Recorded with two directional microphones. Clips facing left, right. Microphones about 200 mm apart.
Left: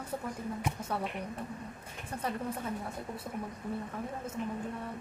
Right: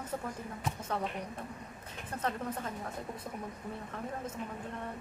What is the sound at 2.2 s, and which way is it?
Speech, 10° left (ahead or behind).